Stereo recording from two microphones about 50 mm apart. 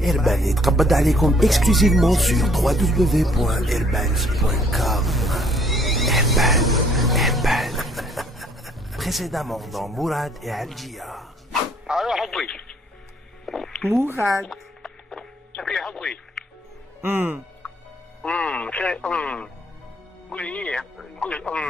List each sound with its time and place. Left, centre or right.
0.0 s music: centre
11.8 s bow-wow: centre
12.4 s music: left
13.5 s a sound: centre
16.4 s music: centre
17.0 s speech: right
18.4 s a man's voice: left